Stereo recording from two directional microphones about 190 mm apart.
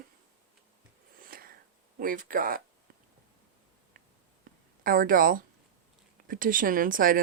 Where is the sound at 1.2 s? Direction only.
50° right (ahead or behind).